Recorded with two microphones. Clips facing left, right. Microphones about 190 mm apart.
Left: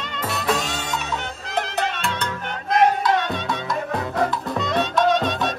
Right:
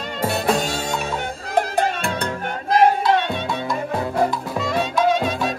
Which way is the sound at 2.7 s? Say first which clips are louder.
Right 2 dB; 30° right (ahead or behind).